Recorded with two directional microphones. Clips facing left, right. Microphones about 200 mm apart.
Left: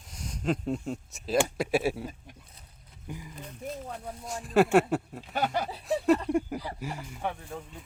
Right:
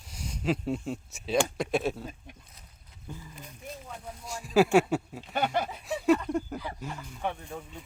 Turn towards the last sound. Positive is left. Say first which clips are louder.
# even
turn(degrees=0)  # may be behind; listen again after turning